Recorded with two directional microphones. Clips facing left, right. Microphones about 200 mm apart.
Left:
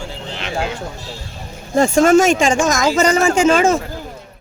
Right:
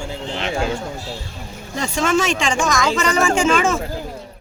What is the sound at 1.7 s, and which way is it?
Speech, 50° left (ahead or behind).